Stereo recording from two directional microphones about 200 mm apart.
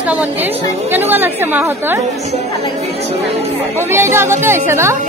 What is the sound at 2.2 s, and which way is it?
Speech, 35° right (ahead or behind).